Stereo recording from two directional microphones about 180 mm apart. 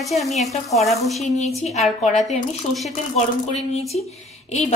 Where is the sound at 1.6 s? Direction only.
35° left (ahead or behind).